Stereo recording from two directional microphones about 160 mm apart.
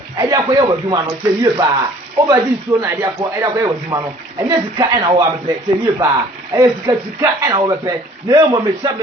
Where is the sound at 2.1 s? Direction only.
20° right (ahead or behind).